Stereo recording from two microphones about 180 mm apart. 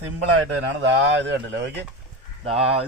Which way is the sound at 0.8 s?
80° right.